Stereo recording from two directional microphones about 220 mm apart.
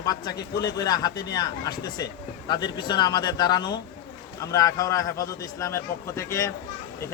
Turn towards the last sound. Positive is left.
turn(degrees=15)  # may be behind; listen again after turning